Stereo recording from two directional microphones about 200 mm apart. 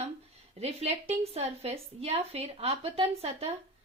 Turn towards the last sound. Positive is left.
turn(degrees=-30)  # may be behind; listen again after turning